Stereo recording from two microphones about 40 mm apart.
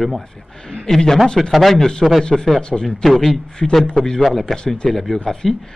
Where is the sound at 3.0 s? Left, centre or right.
Centre.